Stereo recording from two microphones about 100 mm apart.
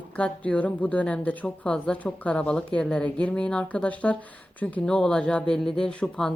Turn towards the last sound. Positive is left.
turn(degrees=10)  # may be behind; listen again after turning